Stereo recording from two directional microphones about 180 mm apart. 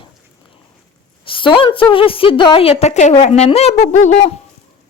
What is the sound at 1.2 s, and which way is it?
A woman's voice, 30° left (ahead or behind).